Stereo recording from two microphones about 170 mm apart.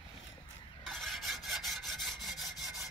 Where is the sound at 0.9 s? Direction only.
Centre (ahead or behind).